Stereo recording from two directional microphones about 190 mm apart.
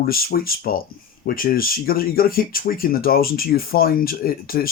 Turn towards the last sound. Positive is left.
turn(degrees=50)  # may be behind; listen again after turning